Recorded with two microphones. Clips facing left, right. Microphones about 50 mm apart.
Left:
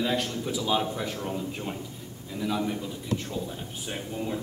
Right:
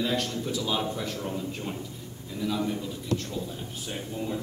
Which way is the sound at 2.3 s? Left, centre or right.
Centre.